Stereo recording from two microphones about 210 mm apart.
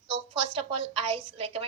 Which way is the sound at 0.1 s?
25° right (ahead or behind).